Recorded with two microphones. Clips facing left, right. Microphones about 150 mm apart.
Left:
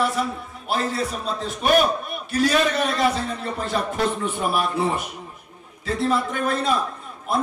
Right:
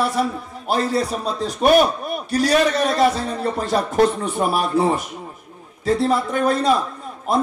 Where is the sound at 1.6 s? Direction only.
40° right (ahead or behind).